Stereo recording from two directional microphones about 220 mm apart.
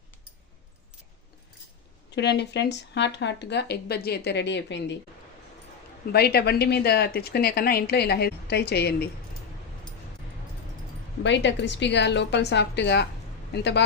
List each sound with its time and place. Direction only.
2.0 s speech: 50° left (ahead or behind)
6.1 s speech: 45° left (ahead or behind)
11.2 s speech: 55° left (ahead or behind)